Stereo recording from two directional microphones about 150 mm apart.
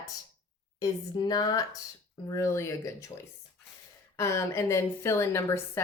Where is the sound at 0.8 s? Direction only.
25° left (ahead or behind).